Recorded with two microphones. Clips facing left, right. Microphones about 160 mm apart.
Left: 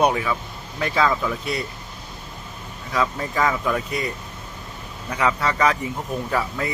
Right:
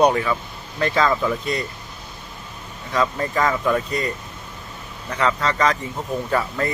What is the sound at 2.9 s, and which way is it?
Speech, centre (ahead or behind).